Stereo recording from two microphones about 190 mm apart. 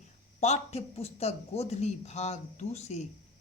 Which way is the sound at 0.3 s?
35° left (ahead or behind).